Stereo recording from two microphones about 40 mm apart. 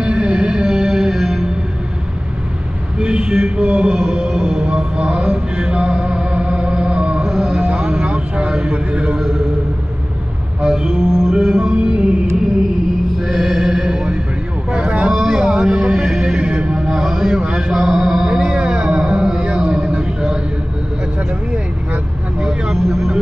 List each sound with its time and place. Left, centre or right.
0.0 s music: centre
3.0 s music: right
7.2 s music: centre
8.1 s speech: right
10.6 s music: centre
11.7 s music: right
13.2 s mantra: centre
14.7 s vehicle: right
15.1 s music: centre
16.3 s mantra: right
18.4 s music: right
22.7 s vehicle: centre